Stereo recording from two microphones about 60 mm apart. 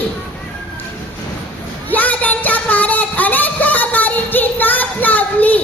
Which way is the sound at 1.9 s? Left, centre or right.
Left.